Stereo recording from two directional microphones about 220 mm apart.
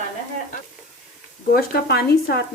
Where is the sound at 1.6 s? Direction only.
45° left (ahead or behind).